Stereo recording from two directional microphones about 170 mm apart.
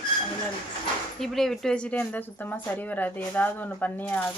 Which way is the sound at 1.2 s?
Centre (ahead or behind).